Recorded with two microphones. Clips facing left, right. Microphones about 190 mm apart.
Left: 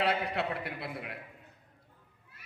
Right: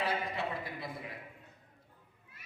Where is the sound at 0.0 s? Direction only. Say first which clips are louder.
Left 4 dB; 70° left (ahead or behind).